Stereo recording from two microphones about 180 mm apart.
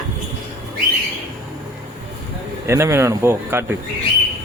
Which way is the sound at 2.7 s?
15° right (ahead or behind).